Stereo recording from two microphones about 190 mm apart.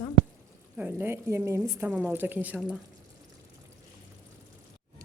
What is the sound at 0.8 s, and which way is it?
A woman's voice, 10° right (ahead or behind).